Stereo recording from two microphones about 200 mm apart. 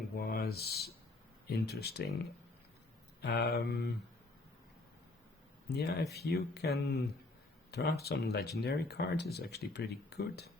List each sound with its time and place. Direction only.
0.2 s speech: 50° left (ahead or behind)
3.2 s speech: 55° left (ahead or behind)
5.6 s speech: 55° left (ahead or behind)